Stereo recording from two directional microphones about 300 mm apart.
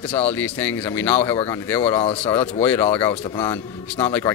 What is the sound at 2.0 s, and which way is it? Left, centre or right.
Speech, centre.